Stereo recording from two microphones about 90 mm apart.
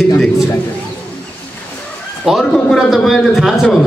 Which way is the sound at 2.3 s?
5° right (ahead or behind).